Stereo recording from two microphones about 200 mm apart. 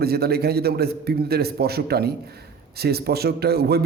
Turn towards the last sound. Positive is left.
turn(degrees=-50)  # may be behind; listen again after turning